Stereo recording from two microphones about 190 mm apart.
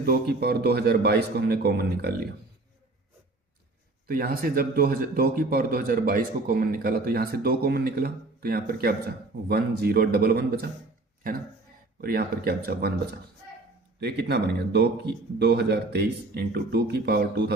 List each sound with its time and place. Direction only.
0.0 s speech: 55° right (ahead or behind)
4.1 s a man's voice: 50° right (ahead or behind)
14.0 s speech: 60° right (ahead or behind)